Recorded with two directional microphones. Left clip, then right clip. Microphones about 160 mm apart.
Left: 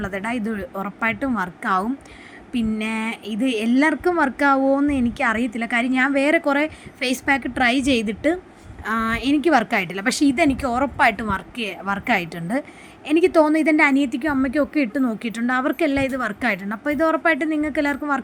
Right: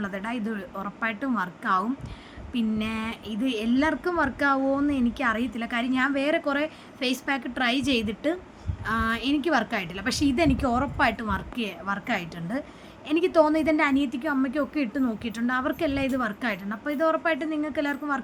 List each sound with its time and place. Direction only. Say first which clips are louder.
0.0 s a woman's voice: left 6 dB; 30° left (ahead or behind)